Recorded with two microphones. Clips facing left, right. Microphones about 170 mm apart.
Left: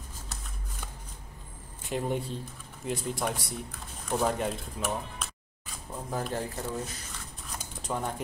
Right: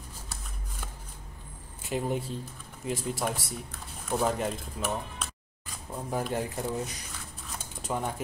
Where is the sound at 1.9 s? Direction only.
Centre (ahead or behind).